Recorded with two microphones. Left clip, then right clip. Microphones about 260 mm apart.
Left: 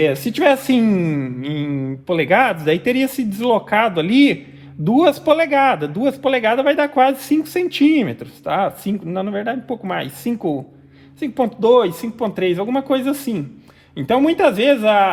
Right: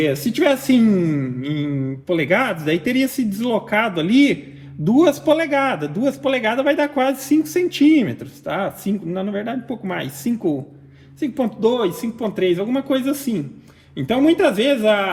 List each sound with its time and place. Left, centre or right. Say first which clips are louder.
0.0 s speech: left 3 dB; left